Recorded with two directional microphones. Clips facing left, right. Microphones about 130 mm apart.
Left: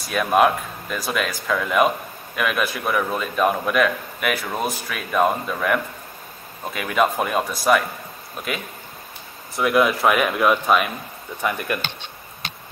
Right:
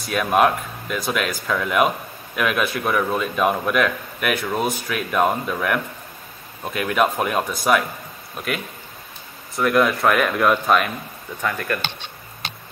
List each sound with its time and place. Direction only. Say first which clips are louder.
0.1 s a man's voice: even; centre (ahead or behind)
9.6 s a man's voice: even; 5° left (ahead or behind)
11.4 s speech: even; 15° left (ahead or behind)